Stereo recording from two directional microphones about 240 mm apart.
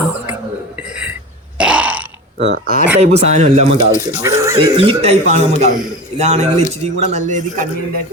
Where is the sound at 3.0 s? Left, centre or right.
Right.